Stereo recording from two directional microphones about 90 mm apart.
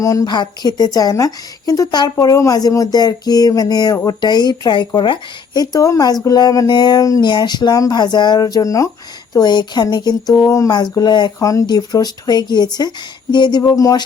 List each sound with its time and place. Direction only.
0.0 s a sound: 40° left (ahead or behind)
0.3 s a woman's voice: 50° left (ahead or behind)
2.1 s a woman's voice: 35° left (ahead or behind); by 5.6 s 65° left (ahead or behind)
5.7 s a woman's voice: 40° left (ahead or behind)
6.2 s a sound: 45° left (ahead or behind)
6.7 s a woman's voice: 55° left (ahead or behind)
9.3 s a woman's voice: 55° left (ahead or behind)
10.3 s a sound: 35° left (ahead or behind)
10.7 s a woman's voice: 55° left (ahead or behind)
11.3 s a woman's voice: 40° left (ahead or behind)
13.3 s a sound: 55° left (ahead or behind)
13.6 s a woman's voice: 40° left (ahead or behind)